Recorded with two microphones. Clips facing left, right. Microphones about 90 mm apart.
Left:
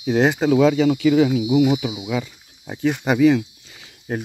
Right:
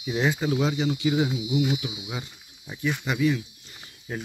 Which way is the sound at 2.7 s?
80° left.